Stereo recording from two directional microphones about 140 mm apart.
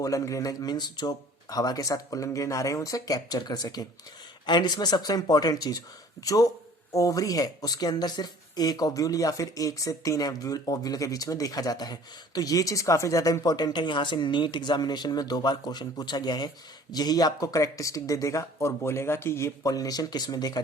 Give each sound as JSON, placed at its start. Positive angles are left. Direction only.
{"t": 0.0, "sound": "speech", "side_deg": 25}